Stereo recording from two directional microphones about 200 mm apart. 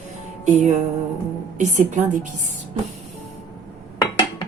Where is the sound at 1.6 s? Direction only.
35° right (ahead or behind).